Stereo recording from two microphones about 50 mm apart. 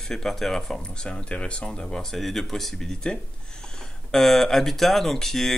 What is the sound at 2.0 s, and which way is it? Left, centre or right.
Speech, centre.